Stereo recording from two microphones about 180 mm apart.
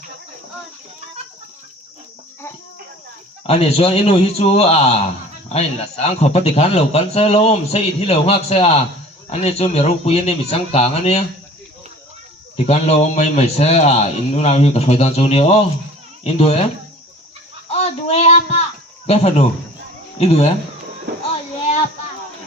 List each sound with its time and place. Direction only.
3.4 s a man's voice: 35° left (ahead or behind)
12.5 s a man's voice: 35° left (ahead or behind)
17.7 s a sound: 35° left (ahead or behind)
19.0 s a man's voice: 35° left (ahead or behind)